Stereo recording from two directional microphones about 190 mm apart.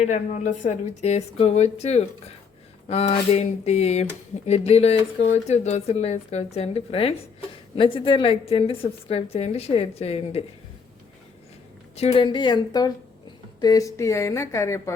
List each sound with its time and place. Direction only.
0.0 s speech: 40° left (ahead or behind)
11.9 s speech: 30° left (ahead or behind); by 14.9 s 15° left (ahead or behind)